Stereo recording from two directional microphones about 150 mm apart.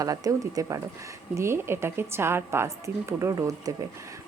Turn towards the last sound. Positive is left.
turn(degrees=-25)  # may be behind; listen again after turning